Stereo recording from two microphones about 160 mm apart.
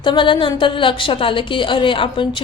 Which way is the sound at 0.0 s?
30° left (ahead or behind).